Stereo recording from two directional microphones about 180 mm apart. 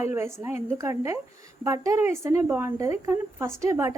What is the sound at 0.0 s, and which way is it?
A woman's voice, 15° right (ahead or behind).